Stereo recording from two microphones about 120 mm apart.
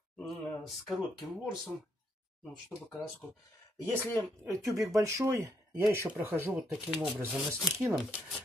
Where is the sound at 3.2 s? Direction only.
5° left (ahead or behind).